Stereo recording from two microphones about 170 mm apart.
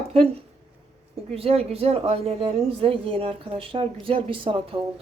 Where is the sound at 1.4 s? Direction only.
35° right (ahead or behind).